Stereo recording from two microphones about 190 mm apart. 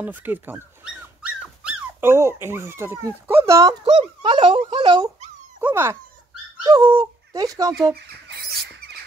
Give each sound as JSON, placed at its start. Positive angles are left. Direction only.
{"t": 0.0, "sound": "dog", "side_deg": -10}
{"t": 2.4, "sound": "speech", "side_deg": -15}
{"t": 5.6, "sound": "dog", "side_deg": -10}
{"t": 6.6, "sound": "speech", "side_deg": -20}